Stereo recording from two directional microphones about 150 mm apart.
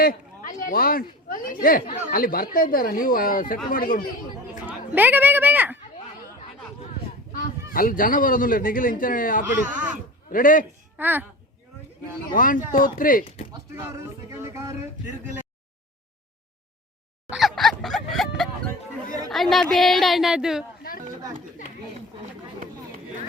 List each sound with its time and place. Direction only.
0.0 s speech: 75° left (ahead or behind)
4.9 s speech: 10° right (ahead or behind)
7.3 s a man's voice: 70° left (ahead or behind)
10.9 s a child's voice: 10° right (ahead or behind)
12.3 s speech: 65° left (ahead or behind)
14.3 s speech: 20° right (ahead or behind)
17.2 s a sound: centre (ahead or behind)
19.3 s a woman's voice: centre (ahead or behind)